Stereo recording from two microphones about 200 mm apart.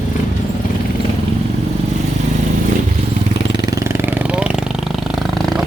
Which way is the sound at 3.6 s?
15° right (ahead or behind).